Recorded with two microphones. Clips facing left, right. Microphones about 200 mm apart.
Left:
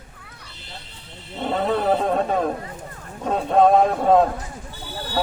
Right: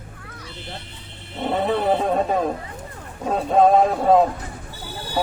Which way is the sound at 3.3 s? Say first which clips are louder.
Even; 5° right (ahead or behind).